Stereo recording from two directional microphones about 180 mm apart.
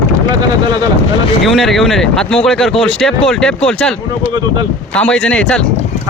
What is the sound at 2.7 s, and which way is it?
Speech, 30° left (ahead or behind).